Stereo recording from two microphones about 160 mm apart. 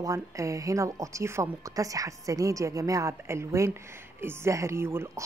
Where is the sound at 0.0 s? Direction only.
20° right (ahead or behind).